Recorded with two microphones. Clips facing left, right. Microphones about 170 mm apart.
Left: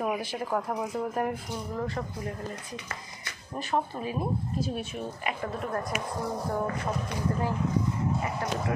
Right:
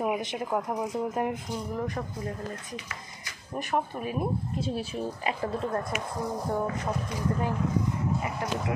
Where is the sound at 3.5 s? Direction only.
15° right (ahead or behind).